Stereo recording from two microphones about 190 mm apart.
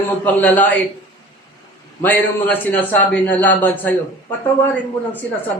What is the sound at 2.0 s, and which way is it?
Speech, 10° left (ahead or behind).